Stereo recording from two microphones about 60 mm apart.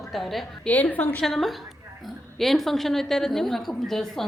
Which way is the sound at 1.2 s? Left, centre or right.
Centre.